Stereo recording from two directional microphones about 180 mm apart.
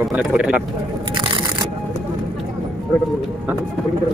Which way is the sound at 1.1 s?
25° right (ahead or behind).